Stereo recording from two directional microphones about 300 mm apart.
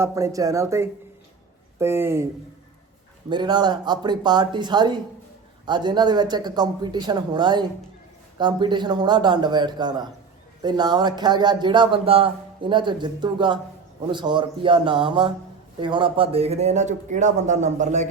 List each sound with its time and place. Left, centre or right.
0.0 s a man's voice: centre
3.2 s a man's voice: centre